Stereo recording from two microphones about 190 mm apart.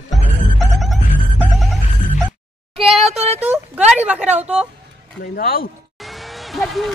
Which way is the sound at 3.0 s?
35° right (ahead or behind).